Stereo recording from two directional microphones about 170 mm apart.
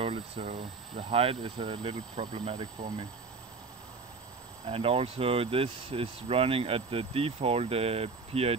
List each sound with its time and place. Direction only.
0.0 s speech: 30° right (ahead or behind)
4.6 s speech: 35° right (ahead or behind)